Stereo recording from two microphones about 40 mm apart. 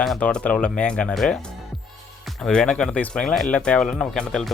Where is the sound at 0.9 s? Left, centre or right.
Left.